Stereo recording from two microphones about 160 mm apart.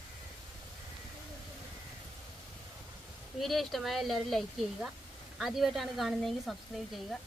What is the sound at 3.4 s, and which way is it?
Speech, centre (ahead or behind).